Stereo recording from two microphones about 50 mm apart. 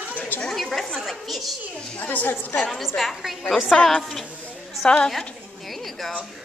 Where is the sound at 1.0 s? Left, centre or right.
Centre.